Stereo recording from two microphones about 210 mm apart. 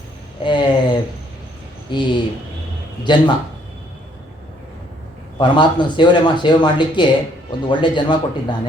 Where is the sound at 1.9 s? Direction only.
20° left (ahead or behind).